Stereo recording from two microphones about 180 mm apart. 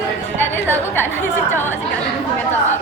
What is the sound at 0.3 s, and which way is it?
A woman's voice, 10° left (ahead or behind).